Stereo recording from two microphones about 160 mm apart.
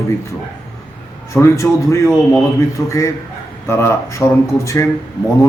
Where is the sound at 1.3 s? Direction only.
20° left (ahead or behind).